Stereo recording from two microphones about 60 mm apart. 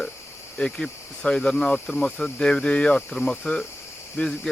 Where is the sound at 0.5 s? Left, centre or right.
Centre.